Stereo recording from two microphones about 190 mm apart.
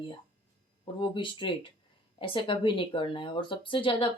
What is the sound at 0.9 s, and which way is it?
Speech, 25° left (ahead or behind).